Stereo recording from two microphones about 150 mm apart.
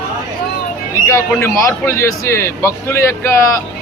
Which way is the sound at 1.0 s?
20° left (ahead or behind).